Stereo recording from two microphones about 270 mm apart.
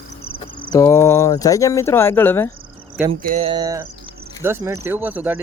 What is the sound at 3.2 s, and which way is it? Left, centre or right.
Speech, right.